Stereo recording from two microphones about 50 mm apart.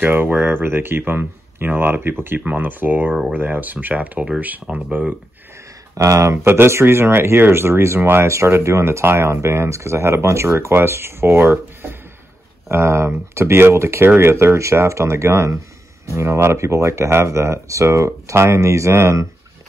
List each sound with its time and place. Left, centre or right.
0.0 s speech: right
4.6 s speech: centre
6.0 s speech: right
6.3 s speech: right
8.3 s speech: right
9.0 s speech: right
10.7 s speech: right
12.6 s speech: right
14.0 s speech: right
14.3 s speech: right
16.2 s speech: right